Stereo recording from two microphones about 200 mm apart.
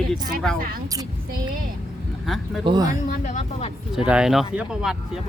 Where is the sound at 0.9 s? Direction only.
20° right (ahead or behind).